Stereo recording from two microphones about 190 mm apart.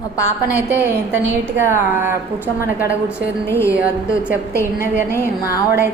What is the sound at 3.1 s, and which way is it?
Speech, 15° left (ahead or behind).